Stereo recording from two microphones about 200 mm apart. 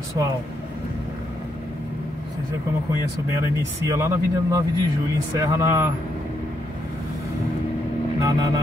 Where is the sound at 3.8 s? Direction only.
15° right (ahead or behind).